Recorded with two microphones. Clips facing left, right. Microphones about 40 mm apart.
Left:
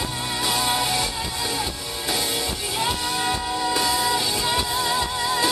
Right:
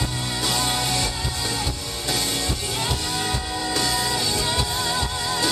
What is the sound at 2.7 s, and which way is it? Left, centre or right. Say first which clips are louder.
Music: left 5 dB; centre.